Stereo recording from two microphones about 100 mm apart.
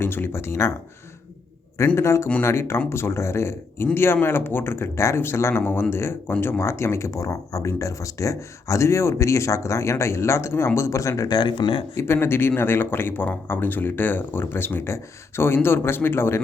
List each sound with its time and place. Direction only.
0.0 s speech: 20° left (ahead or behind)
2.0 s speech: 30° left (ahead or behind)
11.3 s speech: 55° left (ahead or behind)
12.0 s speech: 25° left (ahead or behind)